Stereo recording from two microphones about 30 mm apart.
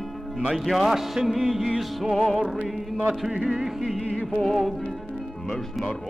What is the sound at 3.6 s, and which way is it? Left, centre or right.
Speech, centre.